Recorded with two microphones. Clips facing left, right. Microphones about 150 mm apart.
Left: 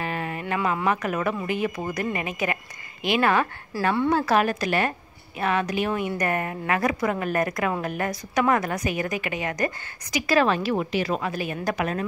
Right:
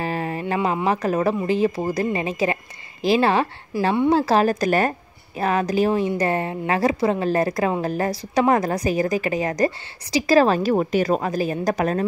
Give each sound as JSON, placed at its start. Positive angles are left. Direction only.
{"t": 0.0, "sound": "speech", "side_deg": -35}
{"t": 3.7, "sound": "a woman's voice", "side_deg": -20}
{"t": 4.1, "sound": "a woman's voice", "side_deg": -35}